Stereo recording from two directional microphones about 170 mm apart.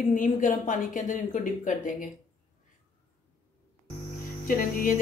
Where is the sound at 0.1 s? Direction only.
50° left (ahead or behind).